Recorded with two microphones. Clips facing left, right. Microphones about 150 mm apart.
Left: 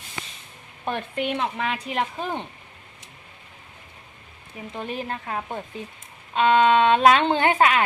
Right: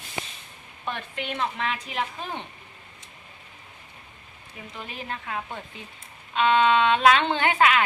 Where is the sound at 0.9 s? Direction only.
45° left (ahead or behind).